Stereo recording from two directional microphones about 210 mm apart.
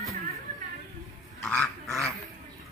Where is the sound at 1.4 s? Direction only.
Centre (ahead or behind).